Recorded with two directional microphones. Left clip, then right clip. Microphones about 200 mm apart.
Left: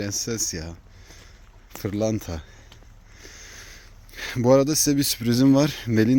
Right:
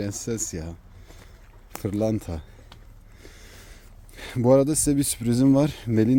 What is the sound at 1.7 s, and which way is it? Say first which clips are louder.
Speech: even; 5° right (ahead or behind).